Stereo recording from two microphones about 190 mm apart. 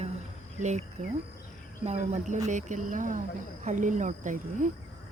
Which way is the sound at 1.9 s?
40° right (ahead or behind).